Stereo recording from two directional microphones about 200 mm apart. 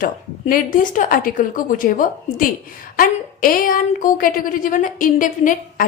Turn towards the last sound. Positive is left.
turn(degrees=40)  # may be behind; listen again after turning